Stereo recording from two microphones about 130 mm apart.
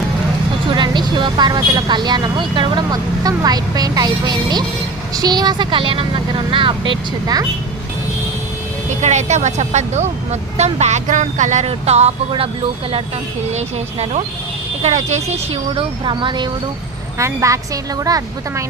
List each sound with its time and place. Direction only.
0.7 s speech: 35° right (ahead or behind)
9.0 s speech: 65° right (ahead or behind)
13.5 s speech: 60° right (ahead or behind)
15.7 s speech: 40° right (ahead or behind)
17.2 s speech: 25° right (ahead or behind)